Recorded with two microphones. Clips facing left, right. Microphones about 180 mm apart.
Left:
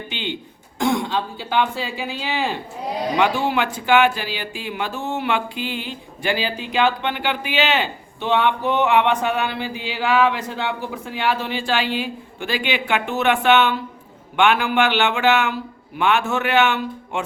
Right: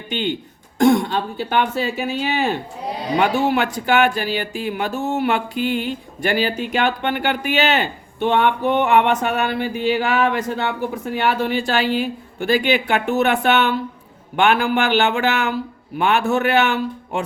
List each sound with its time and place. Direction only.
0.1 s a man's voice: 45° right (ahead or behind)